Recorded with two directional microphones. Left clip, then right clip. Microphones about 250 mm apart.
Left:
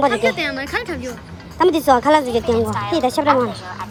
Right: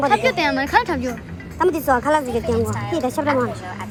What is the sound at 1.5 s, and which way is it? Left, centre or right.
A woman's voice, left.